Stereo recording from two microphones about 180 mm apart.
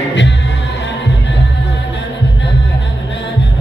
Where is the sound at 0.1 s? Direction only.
80° left.